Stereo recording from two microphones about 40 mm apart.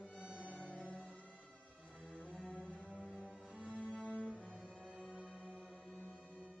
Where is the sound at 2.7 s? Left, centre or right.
Left.